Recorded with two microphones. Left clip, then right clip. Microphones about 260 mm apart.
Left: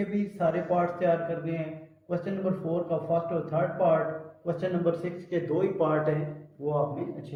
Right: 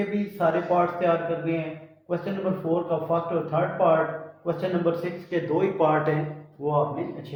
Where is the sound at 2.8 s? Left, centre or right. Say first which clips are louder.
Right 3 dB; centre.